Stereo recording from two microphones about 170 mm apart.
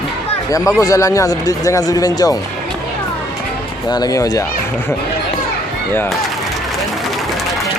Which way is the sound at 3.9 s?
25° left (ahead or behind).